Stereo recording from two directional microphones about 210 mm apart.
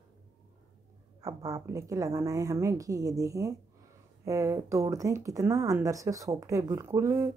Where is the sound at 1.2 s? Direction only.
15° right (ahead or behind).